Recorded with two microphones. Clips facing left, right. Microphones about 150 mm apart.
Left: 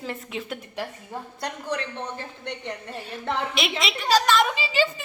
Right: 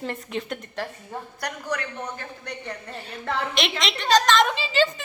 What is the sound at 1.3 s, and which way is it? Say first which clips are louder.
A woman's voice: even; 25° left (ahead or behind).